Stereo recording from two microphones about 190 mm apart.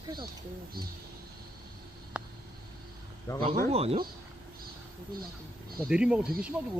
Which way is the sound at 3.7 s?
30° right (ahead or behind).